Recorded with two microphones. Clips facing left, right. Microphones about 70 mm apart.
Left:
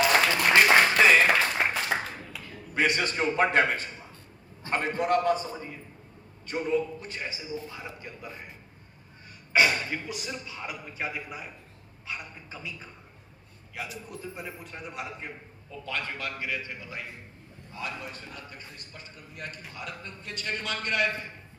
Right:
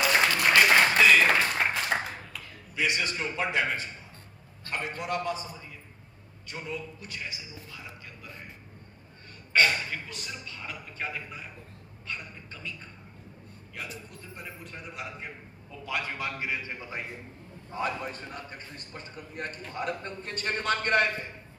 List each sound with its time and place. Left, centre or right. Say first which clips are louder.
0.4 s applause: left 1 dB; centre
0.9 s clapping: left 1 dB; left
1.3 s a sound: left 1 dB; centre
2.7 s a man's voice: left 3 dB; left
6.5 s a man's voice: left 10 dB; left
9.5 s a man's voice: left 1 dB; centre
14.1 s a man's voice: left 5 dB; centre
15.7 s a man's voice: right 1 dB; centre; by 17.0 s right
17.7 s a man's voice: right 5 dB; right